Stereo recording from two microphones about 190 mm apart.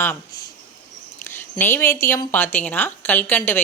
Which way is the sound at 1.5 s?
15° left (ahead or behind).